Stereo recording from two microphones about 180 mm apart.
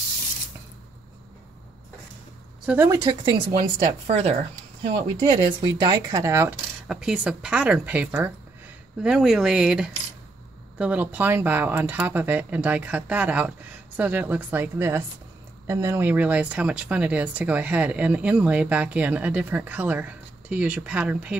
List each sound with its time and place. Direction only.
2.6 s speech: 10° right (ahead or behind)
2.9 s speech: 25° right (ahead or behind)
6.9 s speech: 5° right (ahead or behind)